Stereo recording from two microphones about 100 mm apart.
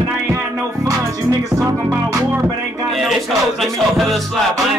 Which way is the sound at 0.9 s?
35° right (ahead or behind).